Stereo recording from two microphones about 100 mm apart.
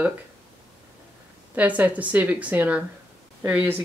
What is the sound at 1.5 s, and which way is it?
Speech, 15° right (ahead or behind).